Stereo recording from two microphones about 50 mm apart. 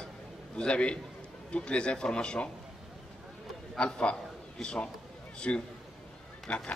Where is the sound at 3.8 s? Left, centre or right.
Left.